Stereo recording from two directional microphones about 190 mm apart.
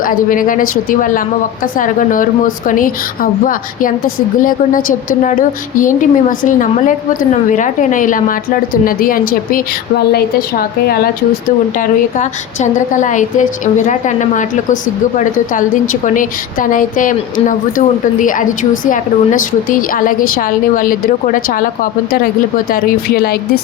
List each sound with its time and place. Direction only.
0.0 s a woman's voice: 45° left (ahead or behind)
10.8 s speech: 55° left (ahead or behind)
11.8 s a woman's voice: 40° left (ahead or behind)